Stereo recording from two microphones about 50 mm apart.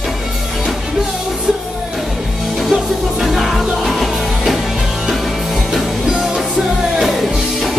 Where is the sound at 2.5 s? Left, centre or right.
Centre.